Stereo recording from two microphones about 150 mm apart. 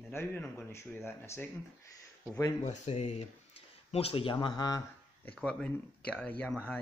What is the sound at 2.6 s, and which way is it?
Speech, 50° left (ahead or behind).